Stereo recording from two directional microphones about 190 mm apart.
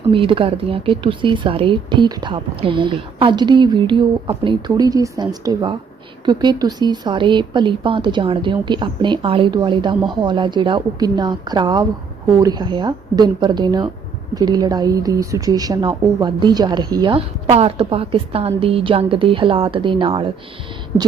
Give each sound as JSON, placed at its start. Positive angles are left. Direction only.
{"t": 0.1, "sound": "speech", "side_deg": -25}